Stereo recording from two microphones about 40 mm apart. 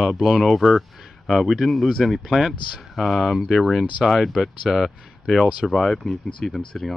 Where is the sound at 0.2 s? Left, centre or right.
Centre.